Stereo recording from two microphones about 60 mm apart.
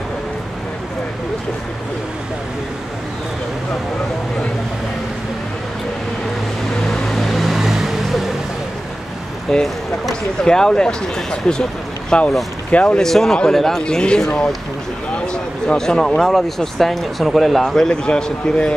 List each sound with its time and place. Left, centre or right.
6.9 s vehicle: centre
9.5 s speech: centre
13.0 s speech: centre